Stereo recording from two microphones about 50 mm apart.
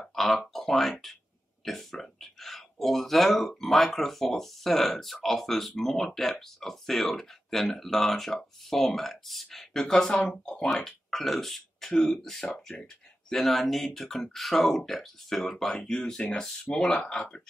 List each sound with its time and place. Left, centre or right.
0.0 s a sound: centre
0.5 s speech: centre
13.3 s speech: centre
15.5 s speech: centre